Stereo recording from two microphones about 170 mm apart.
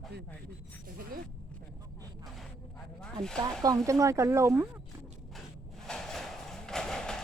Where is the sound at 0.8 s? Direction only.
55° right (ahead or behind).